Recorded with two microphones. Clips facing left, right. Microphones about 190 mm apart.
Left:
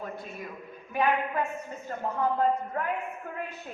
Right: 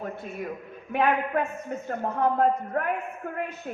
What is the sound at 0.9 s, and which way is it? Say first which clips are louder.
A woman's voice: right 3 dB; 60° right (ahead or behind).